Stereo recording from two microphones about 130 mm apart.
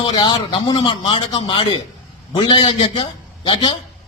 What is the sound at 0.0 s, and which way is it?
A man's voice, 35° left (ahead or behind).